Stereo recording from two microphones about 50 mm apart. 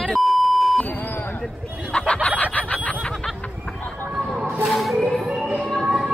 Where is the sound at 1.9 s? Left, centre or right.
Left.